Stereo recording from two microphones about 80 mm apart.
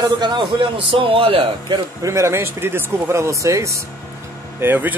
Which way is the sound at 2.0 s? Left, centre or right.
Right.